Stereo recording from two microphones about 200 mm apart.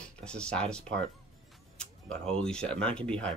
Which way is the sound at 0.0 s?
5° left (ahead or behind).